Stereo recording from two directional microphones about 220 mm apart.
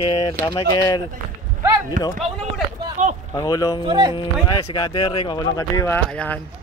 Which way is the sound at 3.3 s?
15° left (ahead or behind).